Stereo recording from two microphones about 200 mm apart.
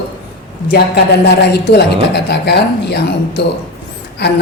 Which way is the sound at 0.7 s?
55° left (ahead or behind).